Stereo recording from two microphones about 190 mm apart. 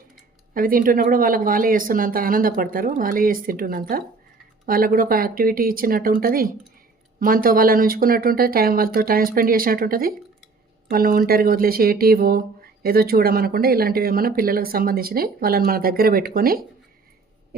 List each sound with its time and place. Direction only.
0.5 s speech: 45° right (ahead or behind)